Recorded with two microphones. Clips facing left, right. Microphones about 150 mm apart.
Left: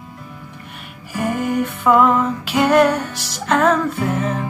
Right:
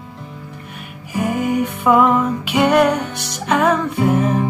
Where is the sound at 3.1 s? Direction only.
55° right (ahead or behind).